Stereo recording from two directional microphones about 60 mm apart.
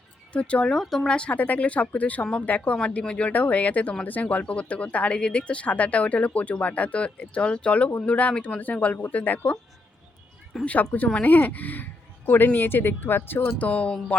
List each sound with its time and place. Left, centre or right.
0.3 s speech: centre
0.8 s speech: centre
1.1 s speech: left
10.7 s speech: left
13.7 s speech: left